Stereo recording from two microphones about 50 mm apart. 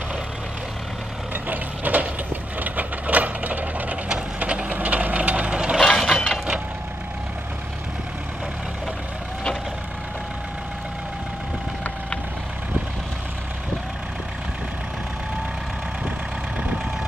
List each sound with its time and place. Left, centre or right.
1.3 s vehicle: right
2.6 s sewing machine: right
4.4 s vehicle: right
5.8 s mechanisms: centre